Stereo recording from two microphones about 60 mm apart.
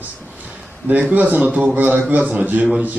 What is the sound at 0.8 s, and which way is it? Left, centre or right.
Speech, right.